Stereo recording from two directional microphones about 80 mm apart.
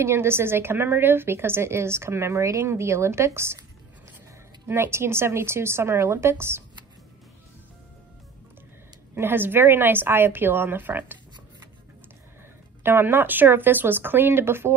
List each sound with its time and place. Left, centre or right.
0.0 s a woman's voice: right
4.6 s a woman's voice: right
9.1 s a woman's voice: right
12.8 s a woman's voice: right